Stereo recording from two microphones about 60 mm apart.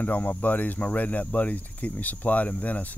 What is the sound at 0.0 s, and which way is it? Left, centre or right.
Speech, left.